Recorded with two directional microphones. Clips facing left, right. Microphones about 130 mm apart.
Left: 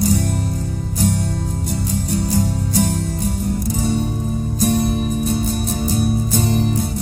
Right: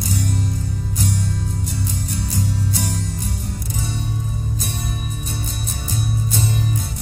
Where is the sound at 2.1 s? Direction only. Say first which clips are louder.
Left 9 dB; 40° left (ahead or behind).